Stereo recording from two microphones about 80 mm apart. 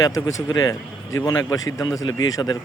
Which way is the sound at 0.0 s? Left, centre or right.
Left.